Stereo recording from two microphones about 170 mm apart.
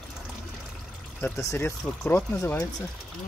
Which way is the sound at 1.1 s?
15° left (ahead or behind).